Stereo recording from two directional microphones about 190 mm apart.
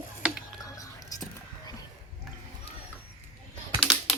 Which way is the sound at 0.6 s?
20° left (ahead or behind).